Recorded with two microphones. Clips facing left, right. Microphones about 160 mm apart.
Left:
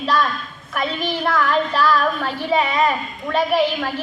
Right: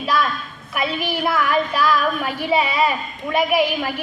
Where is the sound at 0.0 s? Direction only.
10° right (ahead or behind).